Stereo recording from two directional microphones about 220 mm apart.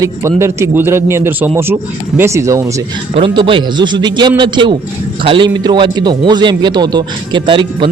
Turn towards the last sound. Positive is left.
turn(degrees=-20)  # may be behind; listen again after turning